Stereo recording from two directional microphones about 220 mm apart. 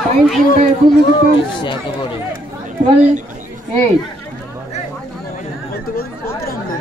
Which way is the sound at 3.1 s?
35° right (ahead or behind).